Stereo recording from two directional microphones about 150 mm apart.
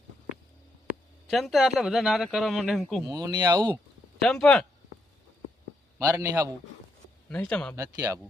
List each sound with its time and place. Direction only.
1.3 s speech: centre (ahead or behind)
3.1 s speech: 25° right (ahead or behind)
4.2 s speech: 5° left (ahead or behind)
6.1 s a man's voice: 20° right (ahead or behind)
7.3 s speech: 10° left (ahead or behind)
7.8 s speech: 20° right (ahead or behind)